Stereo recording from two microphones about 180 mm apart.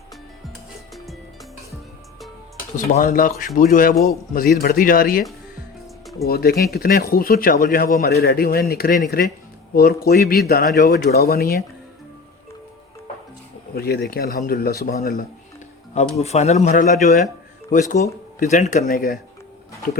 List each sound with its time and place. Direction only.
0.9 s music: centre (ahead or behind)
2.7 s speech: 45° left (ahead or behind)
6.2 s speech: 60° left (ahead or behind)
13.7 s speech: 60° left (ahead or behind)
16.0 s speech: 35° left (ahead or behind)
18.9 s speech: 55° left (ahead or behind)